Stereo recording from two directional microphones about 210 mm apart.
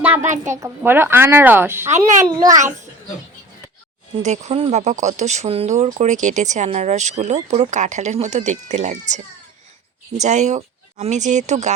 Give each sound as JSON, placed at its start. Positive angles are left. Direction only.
{"t": 0.0, "sound": "a sound", "side_deg": -10}
{"t": 0.4, "sound": "a woman's voice", "side_deg": -15}
{"t": 4.2, "sound": "speech", "side_deg": -35}
{"t": 10.2, "sound": "speech", "side_deg": -35}